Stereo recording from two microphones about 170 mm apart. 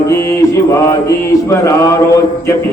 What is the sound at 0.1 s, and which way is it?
Mantra, 15° left (ahead or behind).